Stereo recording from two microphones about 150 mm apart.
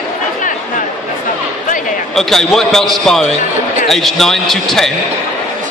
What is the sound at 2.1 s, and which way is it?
Speech, centre (ahead or behind).